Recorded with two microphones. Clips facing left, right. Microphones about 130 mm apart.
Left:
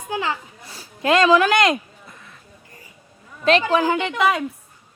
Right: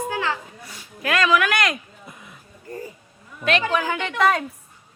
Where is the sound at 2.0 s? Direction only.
15° right (ahead or behind).